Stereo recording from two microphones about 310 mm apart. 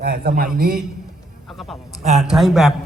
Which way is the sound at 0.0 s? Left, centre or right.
Right.